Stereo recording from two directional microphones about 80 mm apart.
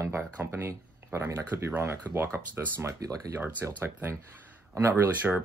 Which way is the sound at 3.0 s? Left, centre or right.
Right.